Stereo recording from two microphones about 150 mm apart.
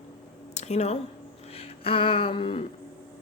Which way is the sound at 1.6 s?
40° left (ahead or behind).